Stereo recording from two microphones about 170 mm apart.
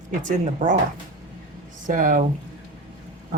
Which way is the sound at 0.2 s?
50° right (ahead or behind).